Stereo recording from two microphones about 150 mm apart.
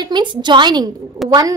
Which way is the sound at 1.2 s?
Centre (ahead or behind).